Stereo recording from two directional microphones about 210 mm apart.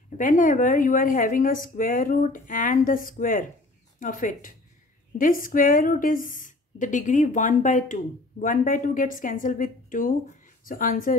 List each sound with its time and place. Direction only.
0.2 s speech: 40° left (ahead or behind)